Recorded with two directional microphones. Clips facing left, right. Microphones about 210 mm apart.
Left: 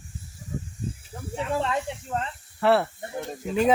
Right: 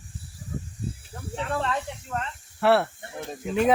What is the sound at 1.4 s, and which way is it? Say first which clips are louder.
Speech: left 2 dB; 10° left (ahead or behind).